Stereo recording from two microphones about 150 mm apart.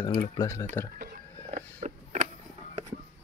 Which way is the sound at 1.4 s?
50° right (ahead or behind).